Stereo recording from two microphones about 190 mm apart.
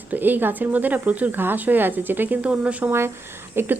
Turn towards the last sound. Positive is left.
turn(degrees=-10)  # may be behind; listen again after turning